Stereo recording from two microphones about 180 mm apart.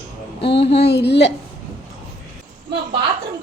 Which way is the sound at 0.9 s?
70° left (ahead or behind).